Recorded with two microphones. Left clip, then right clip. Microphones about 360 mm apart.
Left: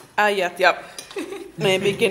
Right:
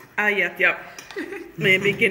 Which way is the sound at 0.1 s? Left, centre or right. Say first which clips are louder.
Left 2 dB; centre.